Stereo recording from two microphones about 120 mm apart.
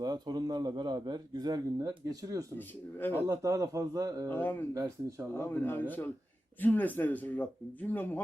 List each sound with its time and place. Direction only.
0.0 s a man's voice: 35° right (ahead or behind)
4.3 s speech: 15° left (ahead or behind)
4.7 s a man's voice: 25° right (ahead or behind)
5.3 s speech: 15° left (ahead or behind)